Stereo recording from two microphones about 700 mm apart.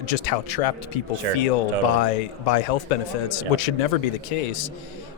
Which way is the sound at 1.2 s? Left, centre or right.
Right.